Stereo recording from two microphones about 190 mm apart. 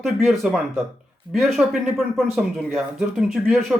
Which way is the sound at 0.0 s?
Centre (ahead or behind).